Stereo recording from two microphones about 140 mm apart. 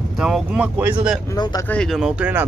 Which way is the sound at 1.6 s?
5° left (ahead or behind).